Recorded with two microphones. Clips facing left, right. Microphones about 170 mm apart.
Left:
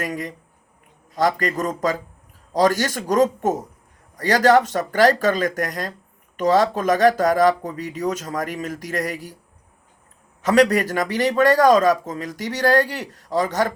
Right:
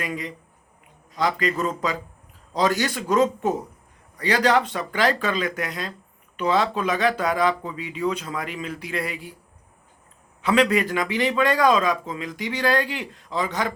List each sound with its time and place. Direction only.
0.0 s a man's voice: 45° left (ahead or behind)
10.4 s a man's voice: 40° left (ahead or behind)